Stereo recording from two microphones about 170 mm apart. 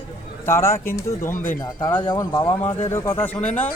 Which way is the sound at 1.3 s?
50° left (ahead or behind).